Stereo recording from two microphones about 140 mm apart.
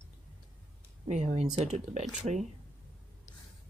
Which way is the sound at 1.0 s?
55° right (ahead or behind).